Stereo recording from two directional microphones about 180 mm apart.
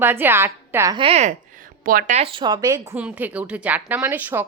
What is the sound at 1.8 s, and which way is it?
Speech, 50° right (ahead or behind).